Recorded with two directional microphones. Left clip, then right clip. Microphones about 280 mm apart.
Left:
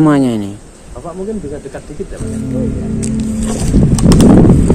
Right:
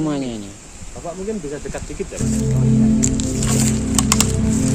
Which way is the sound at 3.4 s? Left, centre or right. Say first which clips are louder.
Left 6 dB; right.